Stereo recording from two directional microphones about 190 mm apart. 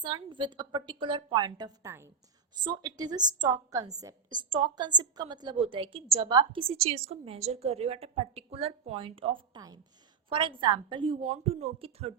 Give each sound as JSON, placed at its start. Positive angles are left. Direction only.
{"t": 0.0, "sound": "a woman's voice", "side_deg": -25}